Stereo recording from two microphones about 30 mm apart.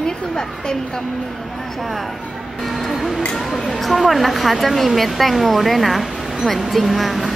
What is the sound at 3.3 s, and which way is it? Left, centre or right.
A woman's voice, centre.